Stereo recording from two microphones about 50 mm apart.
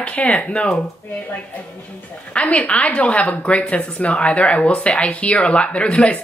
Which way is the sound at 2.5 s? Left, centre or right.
Left.